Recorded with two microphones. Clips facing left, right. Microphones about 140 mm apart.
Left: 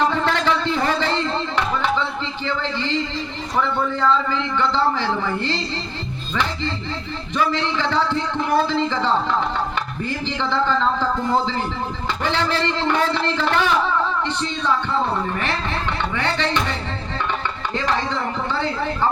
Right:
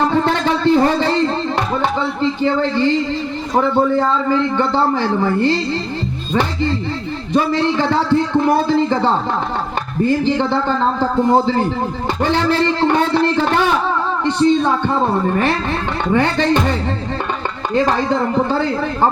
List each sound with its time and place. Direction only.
0.1 s a sound: 40° right (ahead or behind)
1.5 s a man's voice: 40° right (ahead or behind)
17.7 s a man's voice: 45° right (ahead or behind)